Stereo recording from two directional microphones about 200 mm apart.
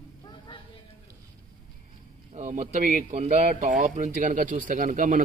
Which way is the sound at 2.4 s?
35° right (ahead or behind).